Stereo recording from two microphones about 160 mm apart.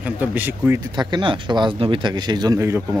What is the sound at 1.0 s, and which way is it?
Speech, 30° right (ahead or behind).